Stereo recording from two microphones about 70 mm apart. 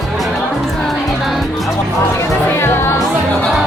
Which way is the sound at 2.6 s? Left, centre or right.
Left.